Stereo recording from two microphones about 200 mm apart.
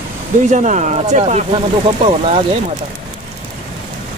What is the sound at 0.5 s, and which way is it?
Speech, 40° right (ahead or behind).